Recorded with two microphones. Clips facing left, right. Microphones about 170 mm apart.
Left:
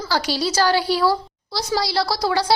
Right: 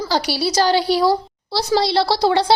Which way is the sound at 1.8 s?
25° right (ahead or behind).